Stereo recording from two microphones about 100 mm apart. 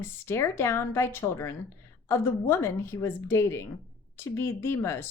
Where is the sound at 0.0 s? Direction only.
25° left (ahead or behind).